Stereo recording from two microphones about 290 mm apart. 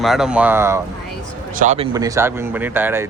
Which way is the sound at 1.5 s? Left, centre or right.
Right.